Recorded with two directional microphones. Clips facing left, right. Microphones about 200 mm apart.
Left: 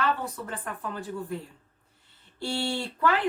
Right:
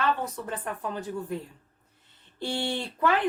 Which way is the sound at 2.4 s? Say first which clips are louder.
Even; 20° right (ahead or behind).